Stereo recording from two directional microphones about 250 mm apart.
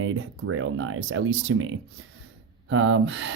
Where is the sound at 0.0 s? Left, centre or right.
Right.